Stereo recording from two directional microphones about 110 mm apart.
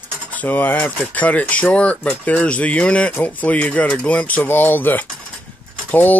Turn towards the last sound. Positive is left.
turn(degrees=15)  # may be behind; listen again after turning